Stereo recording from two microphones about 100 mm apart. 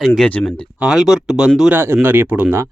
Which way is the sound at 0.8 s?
5° right (ahead or behind).